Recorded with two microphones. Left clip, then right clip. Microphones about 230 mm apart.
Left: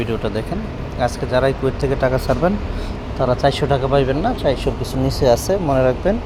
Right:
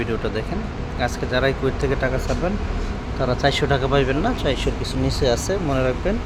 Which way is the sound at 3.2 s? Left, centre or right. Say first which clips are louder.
Left 3 dB; centre.